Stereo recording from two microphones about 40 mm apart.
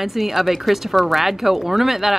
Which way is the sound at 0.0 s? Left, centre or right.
Centre.